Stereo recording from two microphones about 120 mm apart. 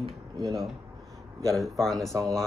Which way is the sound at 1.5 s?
Centre (ahead or behind).